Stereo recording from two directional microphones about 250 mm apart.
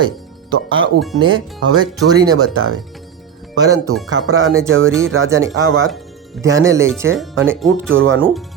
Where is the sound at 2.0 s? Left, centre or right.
Centre.